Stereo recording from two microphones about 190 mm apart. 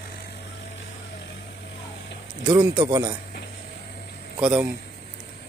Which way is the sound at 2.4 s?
20° right (ahead or behind).